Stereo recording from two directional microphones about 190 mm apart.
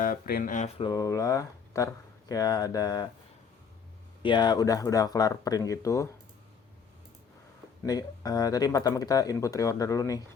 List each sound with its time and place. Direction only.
0.0 s speech: 50° left (ahead or behind)
0.9 s speech: 20° left (ahead or behind)
4.2 s speech: 25° left (ahead or behind)
7.9 s speech: 20° left (ahead or behind)